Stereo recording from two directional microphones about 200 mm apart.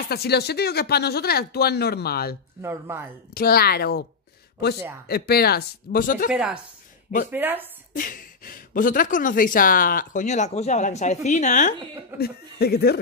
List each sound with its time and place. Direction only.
0.1 s speech: 55° left (ahead or behind)
2.6 s speech: 10° right (ahead or behind)
3.3 s speech: 50° left (ahead or behind)
5.0 s speech: 50° left (ahead or behind)
6.3 s speech: 5° right (ahead or behind)
7.9 s speech: 45° left (ahead or behind)
12.2 s speech: 50° left (ahead or behind)